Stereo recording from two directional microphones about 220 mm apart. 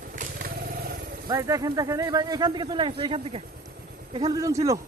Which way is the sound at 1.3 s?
15° right (ahead or behind).